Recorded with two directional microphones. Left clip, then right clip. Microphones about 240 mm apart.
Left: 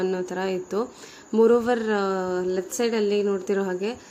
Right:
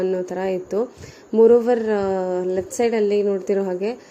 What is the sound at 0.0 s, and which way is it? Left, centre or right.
A woman's voice, centre.